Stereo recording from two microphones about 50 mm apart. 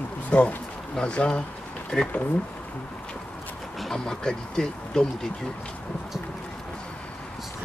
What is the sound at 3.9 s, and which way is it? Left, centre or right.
Speech, centre.